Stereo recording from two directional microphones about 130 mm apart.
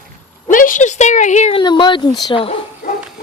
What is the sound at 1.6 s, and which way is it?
Speech, 35° left (ahead or behind).